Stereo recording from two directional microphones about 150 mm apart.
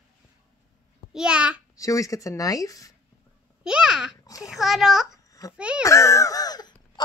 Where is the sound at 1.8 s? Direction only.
20° left (ahead or behind).